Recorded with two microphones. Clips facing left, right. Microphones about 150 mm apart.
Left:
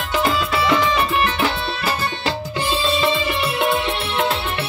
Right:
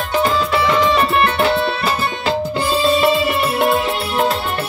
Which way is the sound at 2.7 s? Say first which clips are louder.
Right 5 dB; 45° right (ahead or behind).